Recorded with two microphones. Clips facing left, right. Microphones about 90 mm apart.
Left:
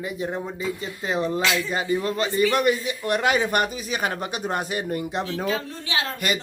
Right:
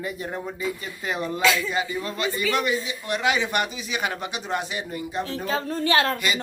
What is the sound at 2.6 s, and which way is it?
Speech, 50° left (ahead or behind).